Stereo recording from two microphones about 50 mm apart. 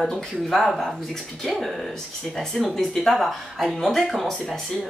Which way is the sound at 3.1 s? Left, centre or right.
Centre.